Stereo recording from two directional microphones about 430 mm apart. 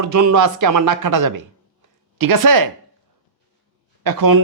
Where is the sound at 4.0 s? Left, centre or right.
Right.